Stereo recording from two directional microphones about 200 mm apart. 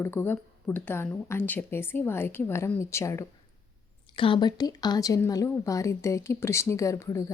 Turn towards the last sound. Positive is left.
turn(degrees=15)  # may be behind; listen again after turning